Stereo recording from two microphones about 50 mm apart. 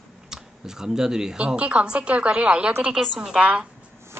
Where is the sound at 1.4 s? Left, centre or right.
Right.